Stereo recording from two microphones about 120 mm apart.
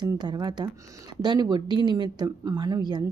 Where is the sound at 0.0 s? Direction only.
35° right (ahead or behind).